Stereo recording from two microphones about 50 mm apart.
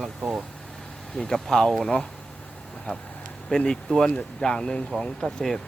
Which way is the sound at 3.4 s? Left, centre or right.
Centre.